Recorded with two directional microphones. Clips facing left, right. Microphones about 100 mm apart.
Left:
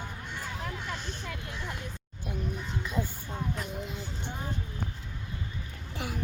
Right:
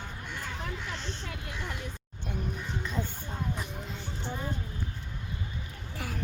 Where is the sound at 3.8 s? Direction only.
15° left (ahead or behind).